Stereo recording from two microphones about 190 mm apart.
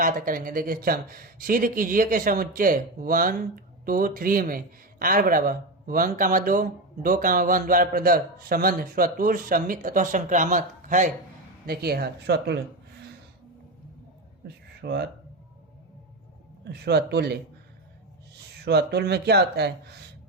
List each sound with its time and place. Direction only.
0.0 s speech: 45° right (ahead or behind)
11.6 s speech: 55° right (ahead or behind)
14.4 s a sound: 60° right (ahead or behind)
16.6 s speech: 60° right (ahead or behind)
18.6 s speech: 60° right (ahead or behind)